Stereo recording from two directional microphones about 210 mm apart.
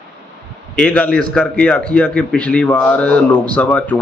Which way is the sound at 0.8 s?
5° left (ahead or behind).